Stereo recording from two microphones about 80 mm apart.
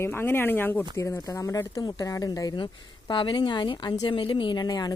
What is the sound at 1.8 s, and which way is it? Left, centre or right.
Speech, left.